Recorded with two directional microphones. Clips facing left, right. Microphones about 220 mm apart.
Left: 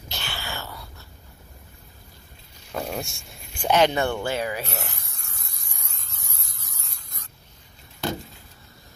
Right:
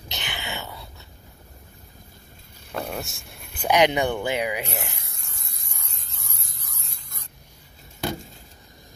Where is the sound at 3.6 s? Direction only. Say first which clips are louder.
Even; 15° right (ahead or behind).